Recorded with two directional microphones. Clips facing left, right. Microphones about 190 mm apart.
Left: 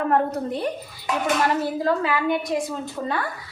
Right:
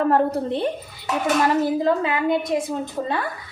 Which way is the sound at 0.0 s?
30° right (ahead or behind).